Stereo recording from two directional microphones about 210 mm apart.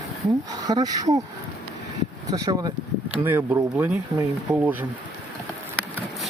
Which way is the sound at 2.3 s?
15° right (ahead or behind).